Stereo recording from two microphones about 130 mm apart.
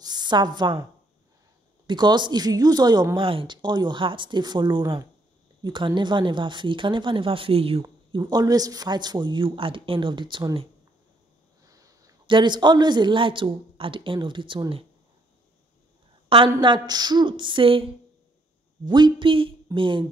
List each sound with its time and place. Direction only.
0.0 s a sound: 35° right (ahead or behind)
1.9 s a man's voice: 35° right (ahead or behind)
7.8 s a man's voice: 35° right (ahead or behind)
11.6 s sniff: 25° right (ahead or behind)
12.3 s a man's voice: 35° right (ahead or behind)
16.3 s a woman's voice: 40° right (ahead or behind)
18.9 s a man's voice: 35° right (ahead or behind)